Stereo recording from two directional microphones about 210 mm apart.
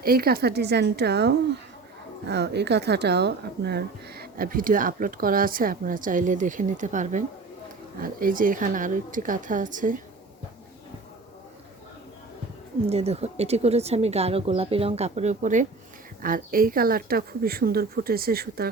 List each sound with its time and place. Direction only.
0.0 s speech: 45° right (ahead or behind)
12.9 s speech: 30° right (ahead or behind); by 18.7 s 45° right (ahead or behind)